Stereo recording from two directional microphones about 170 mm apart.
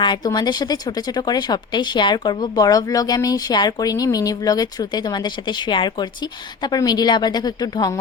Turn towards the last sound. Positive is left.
turn(degrees=25)  # may be behind; listen again after turning